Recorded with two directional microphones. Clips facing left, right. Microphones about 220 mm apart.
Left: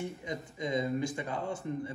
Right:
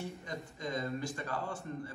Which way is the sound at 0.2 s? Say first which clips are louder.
Left 4 dB; 15° left (ahead or behind).